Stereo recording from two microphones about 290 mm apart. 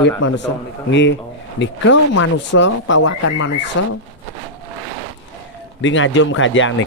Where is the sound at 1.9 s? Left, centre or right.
Left.